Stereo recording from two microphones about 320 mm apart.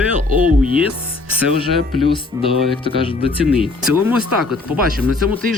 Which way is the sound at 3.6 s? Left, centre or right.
Centre.